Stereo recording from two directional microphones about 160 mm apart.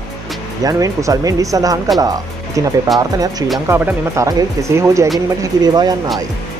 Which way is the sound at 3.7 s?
20° right (ahead or behind).